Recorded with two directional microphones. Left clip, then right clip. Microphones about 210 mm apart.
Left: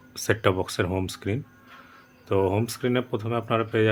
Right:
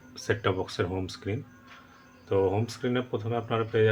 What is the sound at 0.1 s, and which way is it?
Speech, 45° left (ahead or behind).